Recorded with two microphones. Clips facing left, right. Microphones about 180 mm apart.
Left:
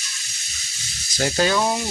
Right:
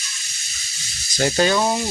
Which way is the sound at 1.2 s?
Centre (ahead or behind).